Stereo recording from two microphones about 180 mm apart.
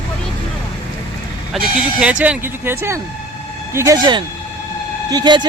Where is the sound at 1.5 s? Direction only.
5° right (ahead or behind); by 5.4 s 25° right (ahead or behind).